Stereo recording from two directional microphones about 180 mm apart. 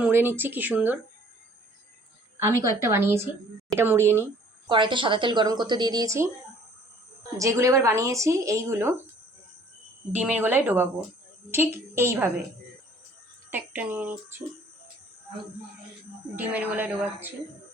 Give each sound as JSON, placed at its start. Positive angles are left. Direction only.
{"t": 0.0, "sound": "speech", "side_deg": -10}
{"t": 2.4, "sound": "speech", "side_deg": -15}
{"t": 4.7, "sound": "speech", "side_deg": -25}
{"t": 7.3, "sound": "speech", "side_deg": -15}
{"t": 10.1, "sound": "speech", "side_deg": -10}
{"t": 13.5, "sound": "speech", "side_deg": -10}
{"t": 16.3, "sound": "speech", "side_deg": -10}